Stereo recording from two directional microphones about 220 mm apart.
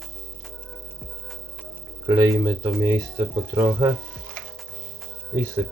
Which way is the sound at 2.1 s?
15° right (ahead or behind).